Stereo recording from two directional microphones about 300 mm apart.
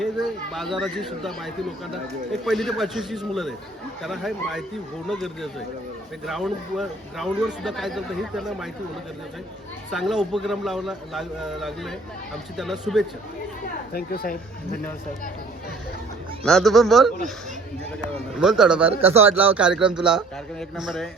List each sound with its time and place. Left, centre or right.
0.0 s speech: centre
9.9 s speech: centre
13.9 s speech: left
16.4 s speech: centre
18.3 s speech: centre